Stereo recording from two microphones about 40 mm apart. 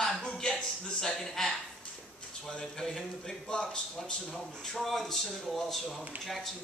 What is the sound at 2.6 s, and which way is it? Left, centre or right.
A man's voice, centre.